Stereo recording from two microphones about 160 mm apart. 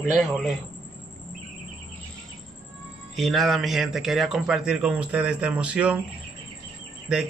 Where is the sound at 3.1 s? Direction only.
Centre (ahead or behind).